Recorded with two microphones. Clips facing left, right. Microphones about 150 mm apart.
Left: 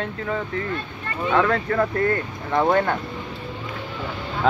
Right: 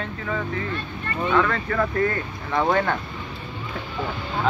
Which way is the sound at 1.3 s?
20° left (ahead or behind).